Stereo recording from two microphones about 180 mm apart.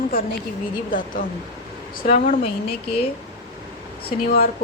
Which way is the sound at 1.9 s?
45° left (ahead or behind).